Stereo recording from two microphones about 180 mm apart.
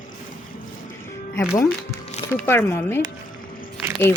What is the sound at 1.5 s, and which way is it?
A woman's voice, 15° left (ahead or behind).